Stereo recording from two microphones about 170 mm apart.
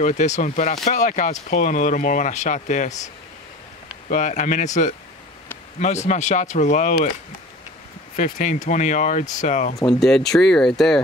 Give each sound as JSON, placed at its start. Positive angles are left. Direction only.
{"t": 0.0, "sound": "speech", "side_deg": 45}
{"t": 4.1, "sound": "speech", "side_deg": 45}
{"t": 8.2, "sound": "speech", "side_deg": 50}
{"t": 9.8, "sound": "speech", "side_deg": 5}